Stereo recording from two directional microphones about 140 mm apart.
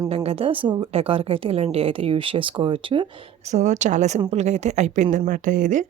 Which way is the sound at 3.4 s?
55° right (ahead or behind).